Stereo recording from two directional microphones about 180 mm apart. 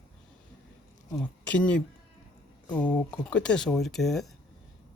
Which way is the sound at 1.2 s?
5° left (ahead or behind).